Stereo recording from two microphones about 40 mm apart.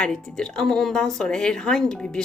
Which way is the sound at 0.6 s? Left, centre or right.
Centre.